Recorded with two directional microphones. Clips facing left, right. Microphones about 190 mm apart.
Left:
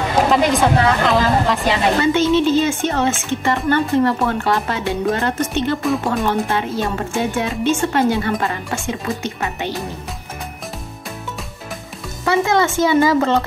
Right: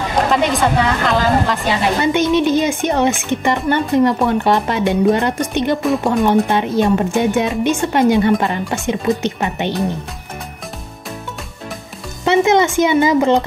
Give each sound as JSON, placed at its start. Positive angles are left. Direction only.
{"t": 0.2, "sound": "speech", "side_deg": 0}
{"t": 2.0, "sound": "speech", "side_deg": -15}
{"t": 5.8, "sound": "speech", "side_deg": 0}
{"t": 6.2, "sound": "speech", "side_deg": -15}
{"t": 12.3, "sound": "speech", "side_deg": -20}